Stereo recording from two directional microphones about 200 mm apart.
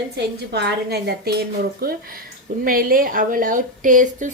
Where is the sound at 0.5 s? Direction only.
55° right (ahead or behind).